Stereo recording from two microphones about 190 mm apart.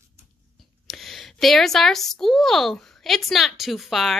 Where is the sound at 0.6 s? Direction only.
Centre (ahead or behind).